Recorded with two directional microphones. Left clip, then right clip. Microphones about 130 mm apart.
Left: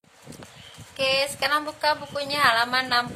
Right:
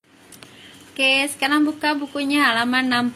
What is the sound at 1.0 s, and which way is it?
A woman's voice, 20° right (ahead or behind).